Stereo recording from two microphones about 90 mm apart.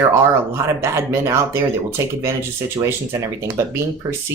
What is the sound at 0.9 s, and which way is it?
Speech, 30° right (ahead or behind).